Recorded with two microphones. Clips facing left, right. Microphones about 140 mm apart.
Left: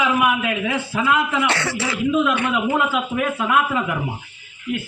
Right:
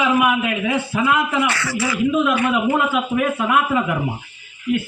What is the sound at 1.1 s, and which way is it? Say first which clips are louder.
Speech: even; 15° right (ahead or behind).